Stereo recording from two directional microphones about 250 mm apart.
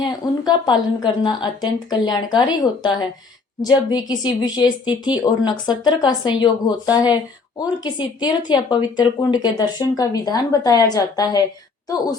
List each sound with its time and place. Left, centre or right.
0.0 s speech: centre